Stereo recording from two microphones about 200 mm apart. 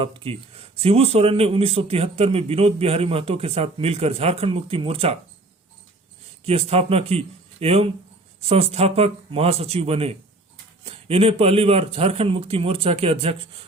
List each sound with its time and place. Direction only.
0.0 s speech: 25° right (ahead or behind)
6.4 s speech: 30° right (ahead or behind)